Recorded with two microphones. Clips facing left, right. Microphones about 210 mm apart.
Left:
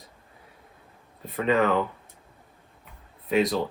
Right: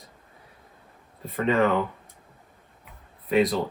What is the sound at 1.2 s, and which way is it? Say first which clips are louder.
Speech: even; centre (ahead or behind).